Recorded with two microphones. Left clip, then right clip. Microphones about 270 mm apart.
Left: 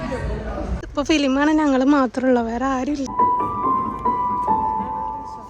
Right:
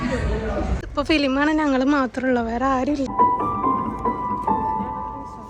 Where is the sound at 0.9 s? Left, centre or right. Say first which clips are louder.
Left 1 dB; centre.